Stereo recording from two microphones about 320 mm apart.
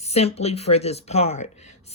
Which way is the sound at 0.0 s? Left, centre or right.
Centre.